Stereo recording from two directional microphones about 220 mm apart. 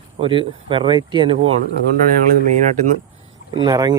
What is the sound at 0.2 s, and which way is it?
Speech, 25° right (ahead or behind).